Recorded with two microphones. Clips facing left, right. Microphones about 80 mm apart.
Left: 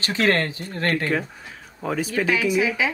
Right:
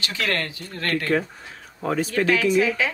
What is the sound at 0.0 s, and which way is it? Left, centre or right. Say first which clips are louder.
Speech: left 5 dB; left.